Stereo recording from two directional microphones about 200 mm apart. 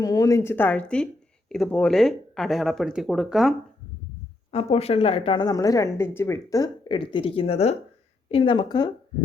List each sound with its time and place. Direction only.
0.0 s speech: 15° left (ahead or behind); by 3.5 s centre (ahead or behind)
4.5 s speech: 30° left (ahead or behind)